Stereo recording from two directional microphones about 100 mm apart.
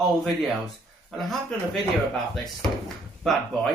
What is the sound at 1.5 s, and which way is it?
Speech, 5° left (ahead or behind).